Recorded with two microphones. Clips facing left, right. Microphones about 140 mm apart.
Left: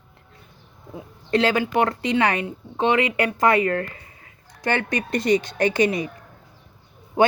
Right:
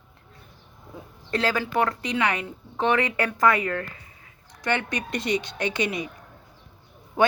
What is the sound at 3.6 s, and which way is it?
Speech, 45° left (ahead or behind).